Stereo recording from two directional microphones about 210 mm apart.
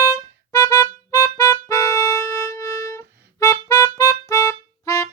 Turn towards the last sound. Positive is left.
turn(degrees=15)  # may be behind; listen again after turning